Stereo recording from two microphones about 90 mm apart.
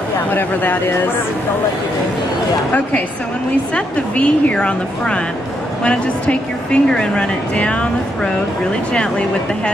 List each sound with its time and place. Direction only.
0.3 s speech: 20° left (ahead or behind)
3.7 s speech: 15° left (ahead or behind)